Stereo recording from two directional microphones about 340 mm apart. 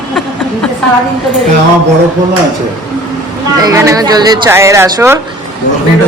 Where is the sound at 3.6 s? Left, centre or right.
Centre.